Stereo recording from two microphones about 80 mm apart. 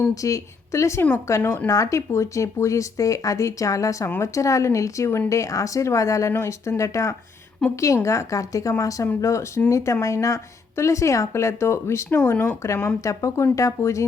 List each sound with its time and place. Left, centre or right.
0.1 s speech: left
1.7 s speech: left
7.6 s a woman's voice: centre
8.0 s speech: left
12.0 s speech: left
12.6 s speech: left